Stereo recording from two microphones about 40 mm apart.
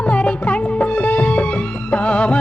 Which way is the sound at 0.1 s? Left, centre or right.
Left.